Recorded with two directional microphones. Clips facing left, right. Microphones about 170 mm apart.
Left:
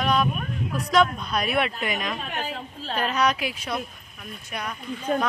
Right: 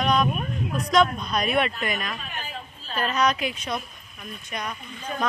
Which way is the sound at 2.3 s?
70° left (ahead or behind).